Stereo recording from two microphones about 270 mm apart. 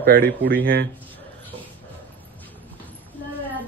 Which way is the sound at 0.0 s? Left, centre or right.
Right.